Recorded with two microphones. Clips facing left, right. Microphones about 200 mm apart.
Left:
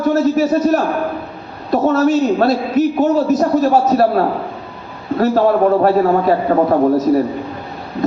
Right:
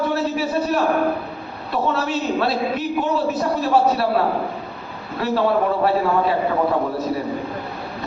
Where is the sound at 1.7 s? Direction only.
40° left (ahead or behind).